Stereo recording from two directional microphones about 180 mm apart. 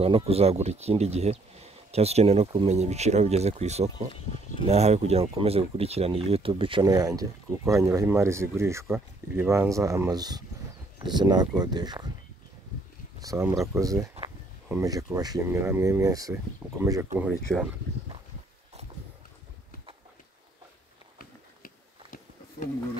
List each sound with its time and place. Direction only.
0.0 s speech: 35° right (ahead or behind)
13.2 s speech: 20° right (ahead or behind)
17.5 s speech: centre (ahead or behind)
21.2 s a sound: 50° left (ahead or behind)